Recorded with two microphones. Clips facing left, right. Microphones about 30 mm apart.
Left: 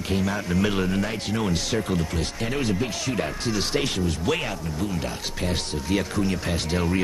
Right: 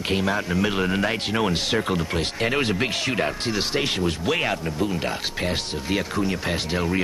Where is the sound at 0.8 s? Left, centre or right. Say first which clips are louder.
Right 3 dB; right.